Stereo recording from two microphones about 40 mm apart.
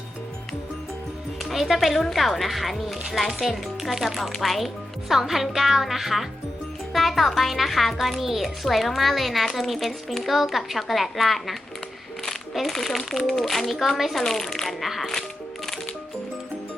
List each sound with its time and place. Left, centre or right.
1.5 s speech: centre
12.5 s speech: centre